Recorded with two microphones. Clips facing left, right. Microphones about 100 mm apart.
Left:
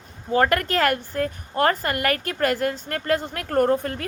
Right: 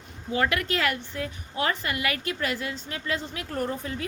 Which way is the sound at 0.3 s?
45° left (ahead or behind).